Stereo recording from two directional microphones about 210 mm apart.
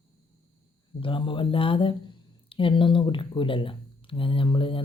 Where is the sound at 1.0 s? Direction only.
25° left (ahead or behind).